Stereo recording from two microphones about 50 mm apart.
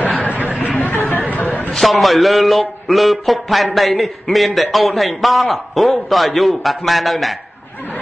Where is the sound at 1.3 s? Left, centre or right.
Left.